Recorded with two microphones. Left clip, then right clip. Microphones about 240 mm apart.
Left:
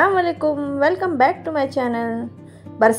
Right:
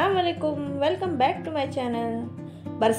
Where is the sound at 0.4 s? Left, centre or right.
Left.